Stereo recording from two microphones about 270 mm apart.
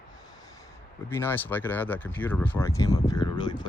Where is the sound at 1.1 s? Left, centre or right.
Centre.